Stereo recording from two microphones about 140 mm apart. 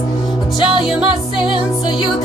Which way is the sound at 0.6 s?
5° right (ahead or behind).